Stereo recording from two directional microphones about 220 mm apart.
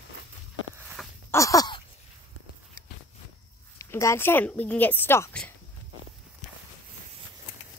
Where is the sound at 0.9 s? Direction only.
10° left (ahead or behind).